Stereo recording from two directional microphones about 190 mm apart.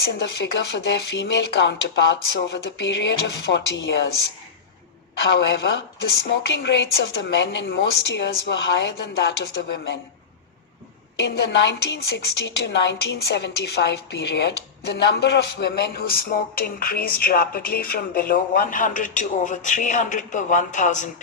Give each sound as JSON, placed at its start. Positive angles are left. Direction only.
{"t": 0.0, "sound": "speech", "side_deg": 60}
{"t": 5.3, "sound": "a woman's voice", "side_deg": 65}
{"t": 11.2, "sound": "a woman's voice", "side_deg": 65}